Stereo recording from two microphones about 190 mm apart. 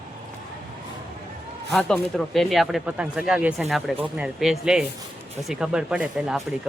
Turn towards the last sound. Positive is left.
turn(degrees=-5)  # may be behind; listen again after turning